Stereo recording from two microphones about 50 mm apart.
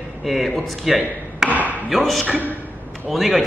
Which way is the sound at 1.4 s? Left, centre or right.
Centre.